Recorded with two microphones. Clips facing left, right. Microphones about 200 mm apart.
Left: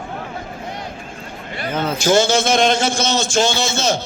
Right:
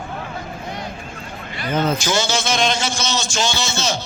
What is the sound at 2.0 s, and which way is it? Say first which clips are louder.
A man's voice: left 6 dB; 55° left (ahead or behind).